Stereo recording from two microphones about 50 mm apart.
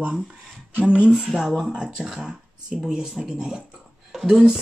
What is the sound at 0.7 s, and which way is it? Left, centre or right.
Speech, centre.